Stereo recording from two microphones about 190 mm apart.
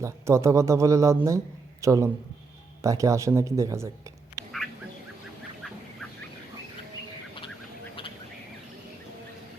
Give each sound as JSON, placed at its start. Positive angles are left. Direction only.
{"t": 0.0, "sound": "speech", "side_deg": -15}